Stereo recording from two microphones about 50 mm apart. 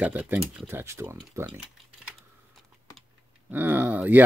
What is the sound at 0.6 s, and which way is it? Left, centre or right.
Speech, right.